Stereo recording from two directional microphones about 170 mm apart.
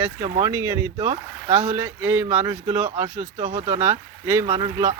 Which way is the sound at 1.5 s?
45° right (ahead or behind).